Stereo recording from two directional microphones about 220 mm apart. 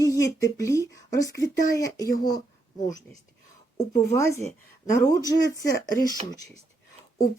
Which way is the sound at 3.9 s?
15° left (ahead or behind).